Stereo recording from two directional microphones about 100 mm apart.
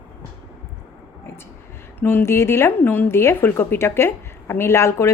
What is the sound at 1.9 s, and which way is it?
A woman's voice, 20° left (ahead or behind).